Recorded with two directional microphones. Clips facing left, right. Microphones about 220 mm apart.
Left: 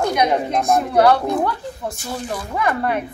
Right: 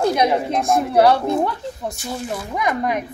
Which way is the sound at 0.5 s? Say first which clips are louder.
Even; centre (ahead or behind).